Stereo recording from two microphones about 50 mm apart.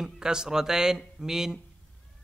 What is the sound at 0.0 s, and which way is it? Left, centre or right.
Speech, centre.